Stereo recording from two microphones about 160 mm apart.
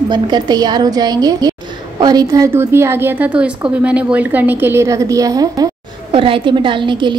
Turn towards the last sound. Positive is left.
turn(degrees=-30)  # may be behind; listen again after turning